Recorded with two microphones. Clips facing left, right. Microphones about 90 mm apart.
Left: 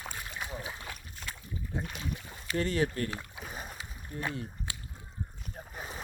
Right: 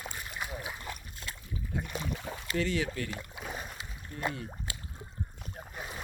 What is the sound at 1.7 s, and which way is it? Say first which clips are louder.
Speech: even; 30° left (ahead or behind).